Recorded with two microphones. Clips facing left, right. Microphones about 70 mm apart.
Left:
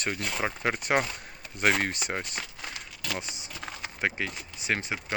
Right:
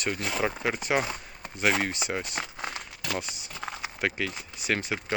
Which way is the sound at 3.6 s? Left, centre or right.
Centre.